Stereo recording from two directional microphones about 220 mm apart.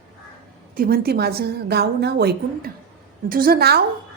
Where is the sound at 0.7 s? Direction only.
40° right (ahead or behind).